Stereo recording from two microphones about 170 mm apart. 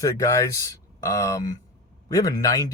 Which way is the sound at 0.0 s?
20° left (ahead or behind).